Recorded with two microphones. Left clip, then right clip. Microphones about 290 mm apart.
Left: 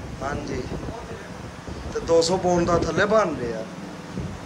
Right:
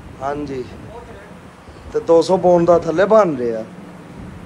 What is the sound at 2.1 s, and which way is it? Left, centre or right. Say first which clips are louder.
A man's voice: right 7 dB; centre.